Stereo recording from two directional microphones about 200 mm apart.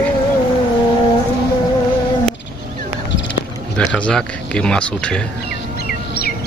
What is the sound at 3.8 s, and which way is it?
Speech, 5° left (ahead or behind).